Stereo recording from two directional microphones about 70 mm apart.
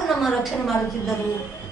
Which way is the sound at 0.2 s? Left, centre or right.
Centre.